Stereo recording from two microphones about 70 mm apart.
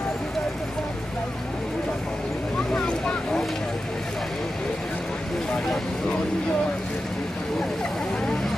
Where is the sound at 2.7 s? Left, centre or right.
Centre.